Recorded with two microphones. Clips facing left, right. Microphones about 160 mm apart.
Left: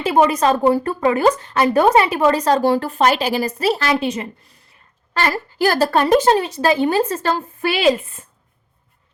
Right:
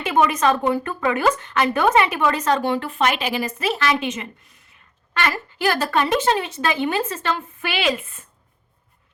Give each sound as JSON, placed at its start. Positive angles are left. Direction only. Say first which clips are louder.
{"t": 0.0, "sound": "speech", "louder": "left 3 dB", "side_deg": 35}